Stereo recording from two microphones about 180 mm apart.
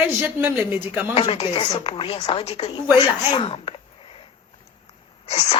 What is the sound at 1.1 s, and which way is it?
A woman's voice, 30° left (ahead or behind).